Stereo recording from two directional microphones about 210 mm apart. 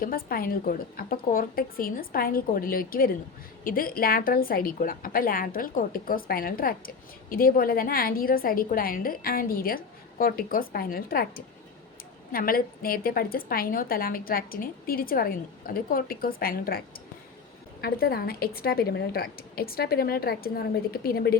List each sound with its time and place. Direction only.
0.0 s a woman's voice: 45° left (ahead or behind)